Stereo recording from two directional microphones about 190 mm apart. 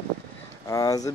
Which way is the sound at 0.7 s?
20° left (ahead or behind).